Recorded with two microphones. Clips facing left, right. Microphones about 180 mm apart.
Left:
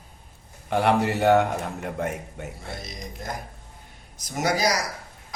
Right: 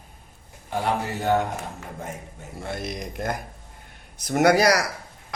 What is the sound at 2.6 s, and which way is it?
A man's voice, 60° right (ahead or behind).